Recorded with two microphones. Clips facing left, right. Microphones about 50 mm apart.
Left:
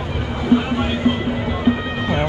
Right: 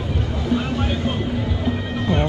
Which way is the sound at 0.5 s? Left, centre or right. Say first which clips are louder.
Left 5 dB; left.